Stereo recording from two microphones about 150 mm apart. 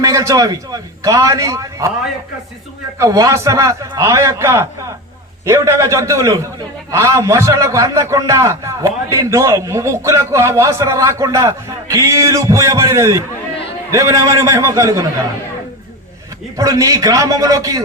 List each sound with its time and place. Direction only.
0.0 s a man's voice: 20° right (ahead or behind)
3.0 s a man's voice: 20° right (ahead or behind)
16.6 s a man's voice: 20° right (ahead or behind)